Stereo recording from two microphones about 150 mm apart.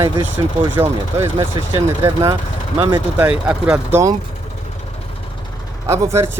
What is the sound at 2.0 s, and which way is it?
Speech, 30° right (ahead or behind).